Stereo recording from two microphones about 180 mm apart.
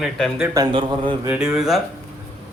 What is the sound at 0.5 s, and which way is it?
Speech, 25° right (ahead or behind).